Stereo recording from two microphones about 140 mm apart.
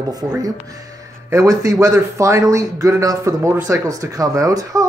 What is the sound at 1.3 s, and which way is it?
A man's voice, 25° right (ahead or behind).